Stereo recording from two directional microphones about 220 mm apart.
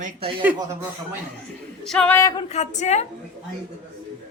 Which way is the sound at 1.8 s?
5° left (ahead or behind).